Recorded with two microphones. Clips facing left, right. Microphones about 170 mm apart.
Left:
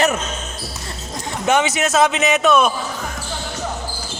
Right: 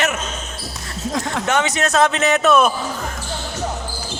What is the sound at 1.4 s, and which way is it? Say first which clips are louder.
Speech: left 4 dB; 15° left (ahead or behind).